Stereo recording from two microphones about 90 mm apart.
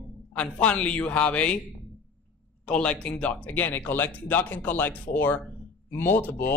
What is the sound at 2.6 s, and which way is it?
A man's voice, 10° left (ahead or behind).